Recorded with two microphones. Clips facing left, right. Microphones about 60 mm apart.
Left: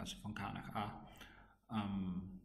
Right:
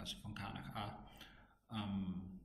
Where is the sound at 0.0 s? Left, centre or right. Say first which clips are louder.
Left 3 dB; centre.